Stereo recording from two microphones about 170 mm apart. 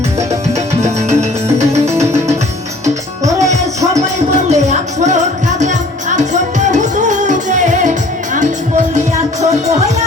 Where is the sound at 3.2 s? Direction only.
40° right (ahead or behind).